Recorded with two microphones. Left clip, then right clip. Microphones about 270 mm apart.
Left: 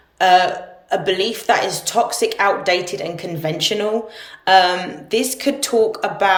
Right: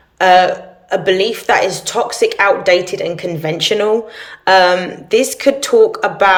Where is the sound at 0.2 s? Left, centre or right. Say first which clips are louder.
Right 4 dB; centre.